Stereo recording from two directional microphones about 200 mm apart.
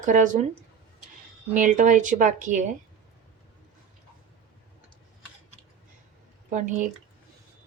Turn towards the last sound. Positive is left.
turn(degrees=-40)  # may be behind; listen again after turning